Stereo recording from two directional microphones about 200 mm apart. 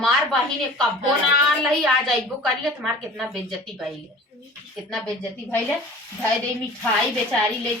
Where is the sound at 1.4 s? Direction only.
Centre (ahead or behind).